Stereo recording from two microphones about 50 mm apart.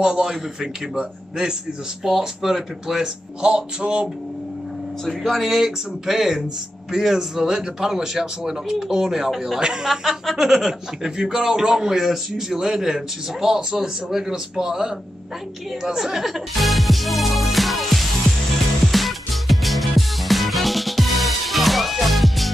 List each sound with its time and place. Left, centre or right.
0.0 s speech: centre
3.4 s music: centre
5.0 s speech: centre
5.5 s speech: centre
9.8 s speech: centre
18.9 s music: centre